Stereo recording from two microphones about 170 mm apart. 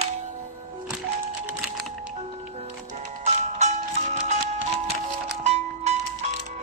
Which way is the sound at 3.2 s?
40° right (ahead or behind).